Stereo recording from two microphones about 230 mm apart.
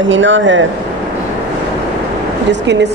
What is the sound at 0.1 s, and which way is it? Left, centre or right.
Speech, right.